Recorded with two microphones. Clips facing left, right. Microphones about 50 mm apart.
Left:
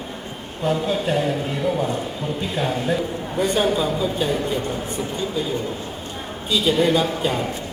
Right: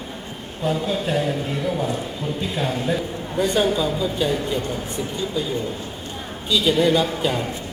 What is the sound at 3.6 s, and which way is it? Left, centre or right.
Speech, left.